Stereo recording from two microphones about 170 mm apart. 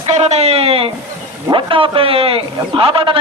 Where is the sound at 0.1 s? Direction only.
40° right (ahead or behind).